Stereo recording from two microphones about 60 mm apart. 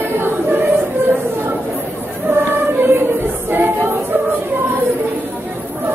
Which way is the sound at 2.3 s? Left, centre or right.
Right.